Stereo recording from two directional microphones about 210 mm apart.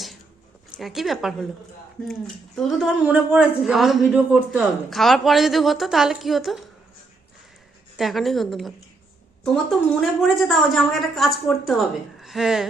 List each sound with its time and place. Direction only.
0.8 s speech: centre (ahead or behind)
2.6 s speech: centre (ahead or behind)
7.9 s speech: centre (ahead or behind)